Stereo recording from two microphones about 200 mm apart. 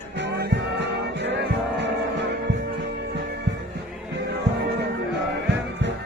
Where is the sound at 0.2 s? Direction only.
55° right (ahead or behind).